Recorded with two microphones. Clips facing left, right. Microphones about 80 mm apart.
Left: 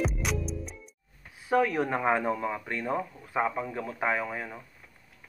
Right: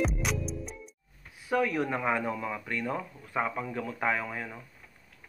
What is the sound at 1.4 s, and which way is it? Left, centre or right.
Speech, left.